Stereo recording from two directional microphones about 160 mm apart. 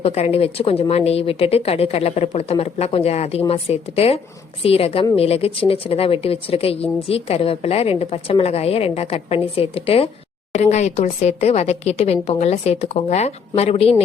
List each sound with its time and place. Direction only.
0.0 s a woman's voice: 40° left (ahead or behind)